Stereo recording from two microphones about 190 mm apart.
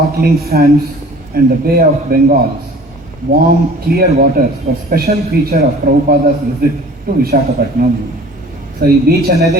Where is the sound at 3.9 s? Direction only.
55° right (ahead or behind).